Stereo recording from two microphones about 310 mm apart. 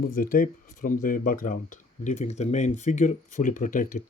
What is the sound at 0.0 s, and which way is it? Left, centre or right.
Speech, left.